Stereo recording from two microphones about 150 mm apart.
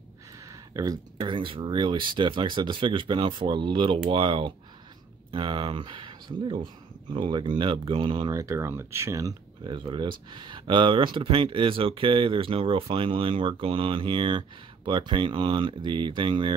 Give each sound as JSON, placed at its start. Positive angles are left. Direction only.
{"t": 0.5, "sound": "speech", "side_deg": -25}